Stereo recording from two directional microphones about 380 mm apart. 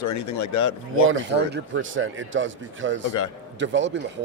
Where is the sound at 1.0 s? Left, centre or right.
Right.